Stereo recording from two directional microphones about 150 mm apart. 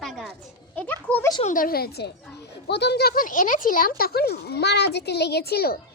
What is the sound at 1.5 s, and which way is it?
Speech, 80° left.